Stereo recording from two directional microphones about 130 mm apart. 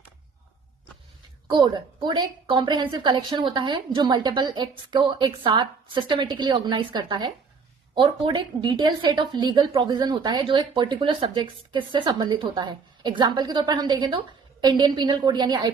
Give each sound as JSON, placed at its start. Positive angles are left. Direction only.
{"t": 1.5, "sound": "a woman's voice", "side_deg": -35}